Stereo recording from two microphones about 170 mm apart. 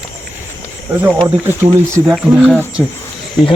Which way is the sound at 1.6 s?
5° right (ahead or behind).